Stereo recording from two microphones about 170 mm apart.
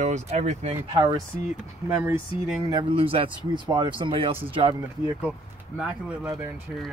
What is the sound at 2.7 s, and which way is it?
Speech, 30° right (ahead or behind).